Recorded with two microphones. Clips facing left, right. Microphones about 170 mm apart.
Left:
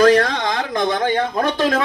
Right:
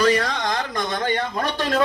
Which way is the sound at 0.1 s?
65° left (ahead or behind).